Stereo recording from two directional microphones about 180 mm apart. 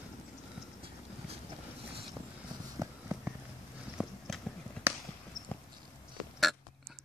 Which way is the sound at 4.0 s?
5° right (ahead or behind).